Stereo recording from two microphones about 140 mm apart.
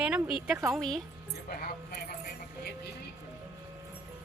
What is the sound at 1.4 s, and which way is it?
Music, 90° left.